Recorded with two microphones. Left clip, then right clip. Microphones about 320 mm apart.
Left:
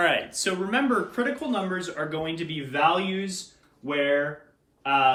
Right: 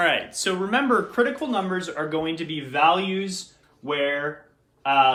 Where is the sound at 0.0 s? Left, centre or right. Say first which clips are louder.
Right 2 dB; centre.